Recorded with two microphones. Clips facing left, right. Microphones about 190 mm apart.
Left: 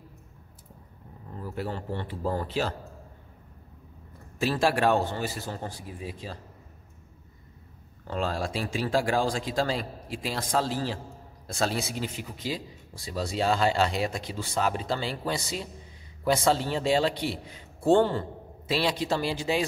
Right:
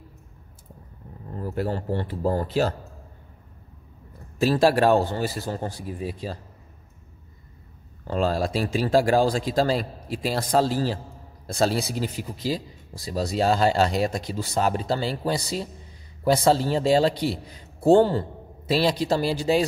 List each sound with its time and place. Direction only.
1.4 s a man's voice: 45° right (ahead or behind)
4.4 s a man's voice: 40° right (ahead or behind)
8.1 s a man's voice: 35° right (ahead or behind)